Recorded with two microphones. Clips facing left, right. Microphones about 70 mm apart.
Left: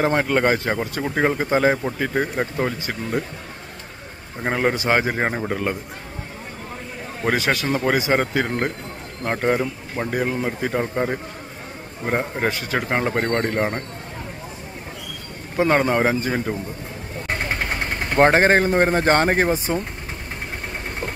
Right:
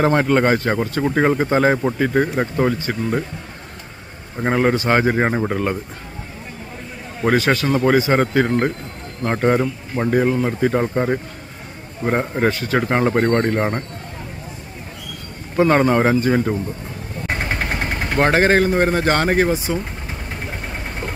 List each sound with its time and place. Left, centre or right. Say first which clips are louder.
0.0 s a man's voice: right 3 dB; centre
4.4 s a man's voice: right 4 dB; centre
5.1 s a man's voice: right 4 dB; centre
7.3 s a man's voice: right 5 dB; centre
12.4 s speech: right 4 dB; centre
12.9 s a man's voice: right 4 dB; centre
15.5 s a man's voice: right 3 dB; centre
17.5 s vehicle: right 2 dB; centre
18.1 s speech: even; left
19.5 s speech: right 1 dB; left